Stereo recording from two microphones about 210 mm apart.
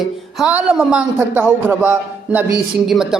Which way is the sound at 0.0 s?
5° right (ahead or behind).